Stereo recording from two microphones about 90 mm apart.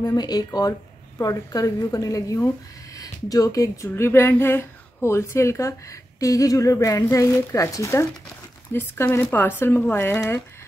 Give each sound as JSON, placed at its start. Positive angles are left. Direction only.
{"t": 0.0, "sound": "speech", "side_deg": 45}